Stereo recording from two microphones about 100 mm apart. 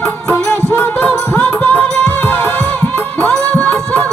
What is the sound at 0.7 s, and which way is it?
Music, 20° left (ahead or behind).